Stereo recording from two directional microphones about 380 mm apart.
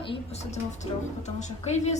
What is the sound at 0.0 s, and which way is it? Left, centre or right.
A woman's voice, centre.